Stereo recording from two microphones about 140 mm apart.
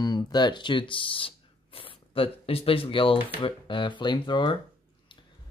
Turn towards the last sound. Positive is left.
turn(degrees=35)  # may be behind; listen again after turning